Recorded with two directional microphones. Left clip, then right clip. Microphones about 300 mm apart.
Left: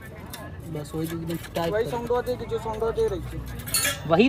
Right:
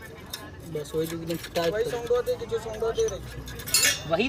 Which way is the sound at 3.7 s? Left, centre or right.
Centre.